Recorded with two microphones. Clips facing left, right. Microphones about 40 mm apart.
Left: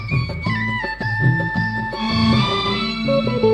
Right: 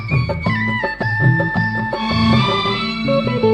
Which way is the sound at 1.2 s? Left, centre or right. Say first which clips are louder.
Right 3 dB; right.